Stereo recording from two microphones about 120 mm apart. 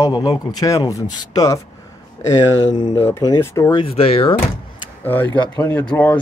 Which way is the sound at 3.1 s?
30° left (ahead or behind).